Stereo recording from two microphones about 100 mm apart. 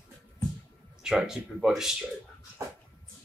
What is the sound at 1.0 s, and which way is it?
Speech, 5° right (ahead or behind).